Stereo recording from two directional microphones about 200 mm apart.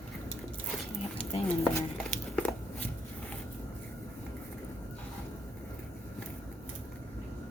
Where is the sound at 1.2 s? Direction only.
5° left (ahead or behind).